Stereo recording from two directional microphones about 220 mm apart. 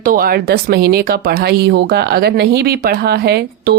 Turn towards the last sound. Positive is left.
turn(degrees=-45)  # may be behind; listen again after turning